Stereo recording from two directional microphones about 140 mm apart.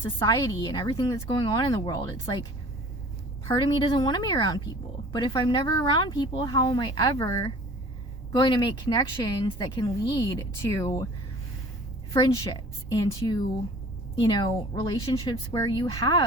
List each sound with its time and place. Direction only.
0.2 s speech: 25° left (ahead or behind)
3.5 s speech: 30° left (ahead or behind)
12.1 s a woman's voice: 30° left (ahead or behind)
15.0 s a woman's voice: 40° left (ahead or behind)